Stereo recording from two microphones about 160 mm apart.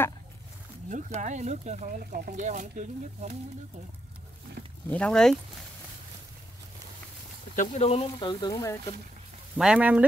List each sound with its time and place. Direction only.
0.8 s speech: 50° right (ahead or behind)
4.8 s speech: 5° left (ahead or behind)
7.5 s speech: 45° left (ahead or behind); by 8.7 s 20° left (ahead or behind)
9.6 s speech: 5° right (ahead or behind)